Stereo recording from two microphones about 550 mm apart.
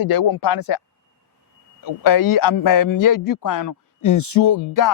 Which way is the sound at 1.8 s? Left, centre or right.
Left.